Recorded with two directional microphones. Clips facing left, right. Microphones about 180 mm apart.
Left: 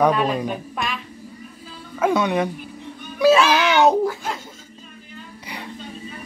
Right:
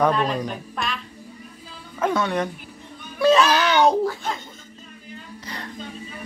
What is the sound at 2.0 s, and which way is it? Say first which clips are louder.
Music: left 3 dB; 10° left (ahead or behind).